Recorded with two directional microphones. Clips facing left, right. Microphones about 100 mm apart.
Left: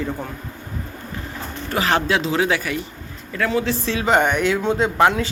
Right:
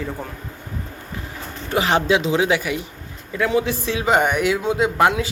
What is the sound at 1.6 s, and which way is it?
A man's voice, 20° right (ahead or behind).